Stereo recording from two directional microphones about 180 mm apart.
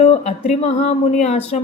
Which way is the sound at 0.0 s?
40° left (ahead or behind).